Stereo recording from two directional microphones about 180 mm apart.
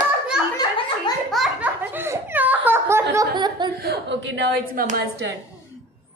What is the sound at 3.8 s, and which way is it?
A woman's voice, 75° right (ahead or behind).